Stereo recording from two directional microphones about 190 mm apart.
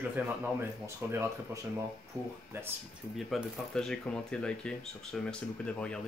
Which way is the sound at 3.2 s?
Centre (ahead or behind).